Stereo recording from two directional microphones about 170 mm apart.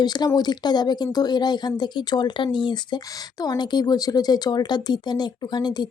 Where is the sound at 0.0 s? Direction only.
25° left (ahead or behind).